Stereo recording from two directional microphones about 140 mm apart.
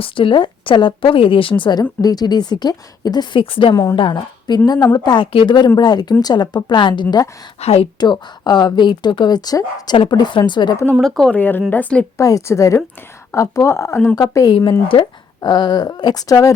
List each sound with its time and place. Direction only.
0.0 s a woman's voice: 40° left (ahead or behind)
7.6 s a woman's voice: 45° left (ahead or behind)
7.9 s a woman's voice: 30° left (ahead or behind)
10.9 s speech: centre (ahead or behind)
12.2 s speech: 25° left (ahead or behind)
14.2 s speech: 25° left (ahead or behind)
14.5 s a woman's voice: 35° left (ahead or behind)